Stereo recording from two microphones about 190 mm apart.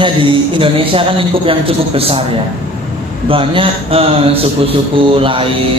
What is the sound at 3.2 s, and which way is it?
Speech, 30° right (ahead or behind).